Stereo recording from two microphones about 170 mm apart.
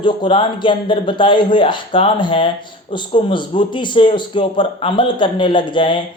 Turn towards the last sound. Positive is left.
turn(degrees=30)  # may be behind; listen again after turning